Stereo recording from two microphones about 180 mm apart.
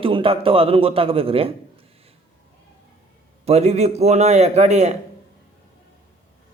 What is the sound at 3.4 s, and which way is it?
Speech, 35° right (ahead or behind).